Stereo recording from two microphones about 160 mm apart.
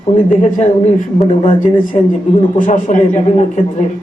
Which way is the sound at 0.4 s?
45° left (ahead or behind).